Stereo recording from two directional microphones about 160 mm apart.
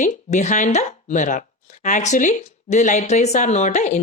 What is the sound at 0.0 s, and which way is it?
Speech, 50° left (ahead or behind).